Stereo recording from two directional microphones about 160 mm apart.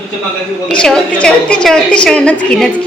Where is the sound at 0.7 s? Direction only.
5° left (ahead or behind).